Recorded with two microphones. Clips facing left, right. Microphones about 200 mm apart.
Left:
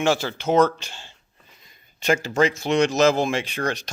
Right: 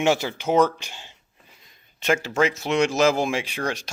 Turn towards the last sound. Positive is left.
turn(degrees=-10)  # may be behind; listen again after turning